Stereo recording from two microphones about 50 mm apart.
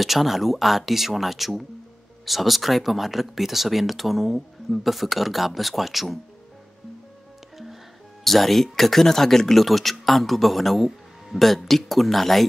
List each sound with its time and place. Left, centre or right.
0.0 s speech: centre
8.2 s speech: centre